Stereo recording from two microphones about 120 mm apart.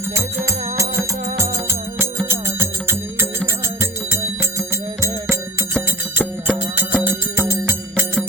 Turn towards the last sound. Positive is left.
turn(degrees=-20)  # may be behind; listen again after turning